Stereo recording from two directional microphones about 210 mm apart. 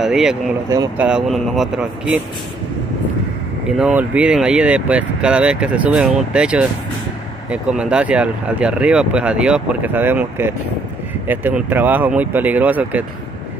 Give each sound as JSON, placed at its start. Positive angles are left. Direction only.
{"t": 0.0, "sound": "speech", "side_deg": -5}
{"t": 0.7, "sound": "speech", "side_deg": -15}
{"t": 1.0, "sound": "speech", "side_deg": 0}
{"t": 3.7, "sound": "speech", "side_deg": -5}